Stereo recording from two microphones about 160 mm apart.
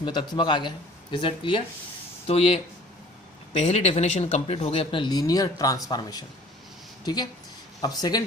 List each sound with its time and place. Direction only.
0.0 s speech: 30° left (ahead or behind)
3.6 s speech: 40° left (ahead or behind); by 8.2 s 25° left (ahead or behind)